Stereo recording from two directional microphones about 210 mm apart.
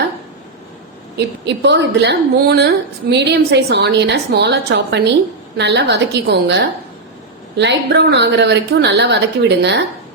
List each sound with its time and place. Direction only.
1.1 s a woman's voice: 55° right (ahead or behind)